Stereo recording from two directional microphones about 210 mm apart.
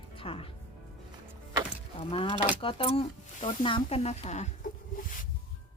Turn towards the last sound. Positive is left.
turn(degrees=40)  # may be behind; listen again after turning